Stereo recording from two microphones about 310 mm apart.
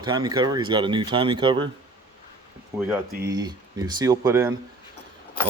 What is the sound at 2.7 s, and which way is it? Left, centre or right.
Speech, centre.